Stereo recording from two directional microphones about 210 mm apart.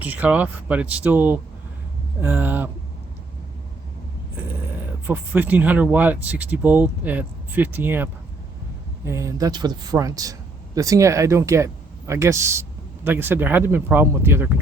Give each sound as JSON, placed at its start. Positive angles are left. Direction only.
{"t": 0.0, "sound": "speech", "side_deg": -10}
{"t": 5.0, "sound": "speech", "side_deg": -10}